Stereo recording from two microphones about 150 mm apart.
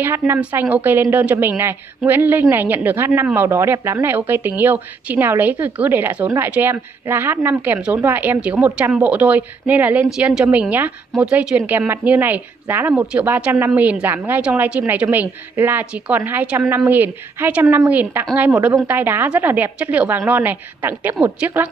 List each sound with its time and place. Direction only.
0.0 s speech: 15° right (ahead or behind)